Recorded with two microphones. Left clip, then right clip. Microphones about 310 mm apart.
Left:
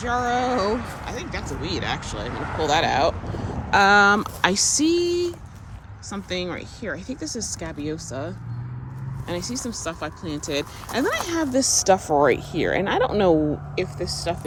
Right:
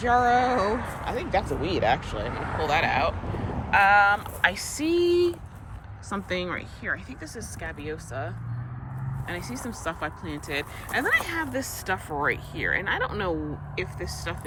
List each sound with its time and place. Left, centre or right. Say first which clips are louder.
0.0 s speech: right 2 dB; centre
2.6 s speech: left 4 dB; centre
3.2 s vehicle: left 1 dB; right
3.7 s speech: left 3 dB; centre